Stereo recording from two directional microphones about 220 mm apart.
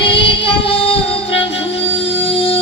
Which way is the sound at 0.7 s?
25° left (ahead or behind).